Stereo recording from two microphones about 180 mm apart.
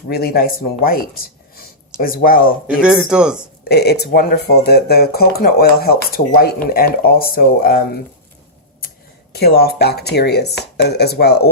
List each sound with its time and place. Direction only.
0.1 s speech: 60° left (ahead or behind)
2.6 s speech: 5° right (ahead or behind)
3.6 s speech: 65° left (ahead or behind)
9.3 s speech: 60° left (ahead or behind)